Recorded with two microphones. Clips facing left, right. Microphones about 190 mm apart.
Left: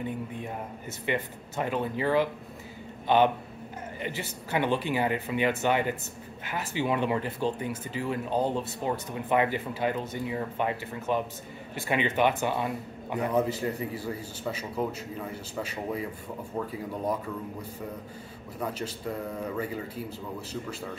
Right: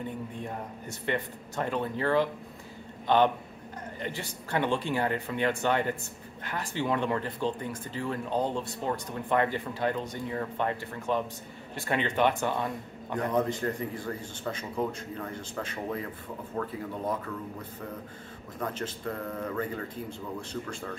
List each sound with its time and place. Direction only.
0.4 s a man's voice: 5° left (ahead or behind)
18.6 s speech: 10° left (ahead or behind)